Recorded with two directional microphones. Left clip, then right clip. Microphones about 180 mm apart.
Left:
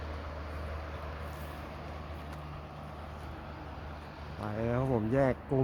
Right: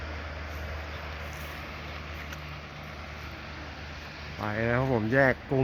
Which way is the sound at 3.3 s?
45° left (ahead or behind).